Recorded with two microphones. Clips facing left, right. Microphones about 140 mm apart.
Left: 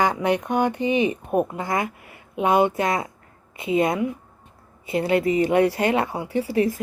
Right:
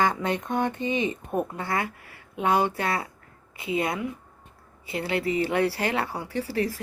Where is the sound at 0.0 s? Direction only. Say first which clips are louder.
Left 4 dB; 15° left (ahead or behind).